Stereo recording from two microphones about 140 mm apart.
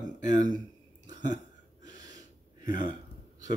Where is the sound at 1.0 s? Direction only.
30° right (ahead or behind).